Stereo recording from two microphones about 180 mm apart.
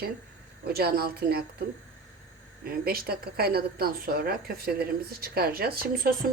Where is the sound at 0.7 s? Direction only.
60° right (ahead or behind).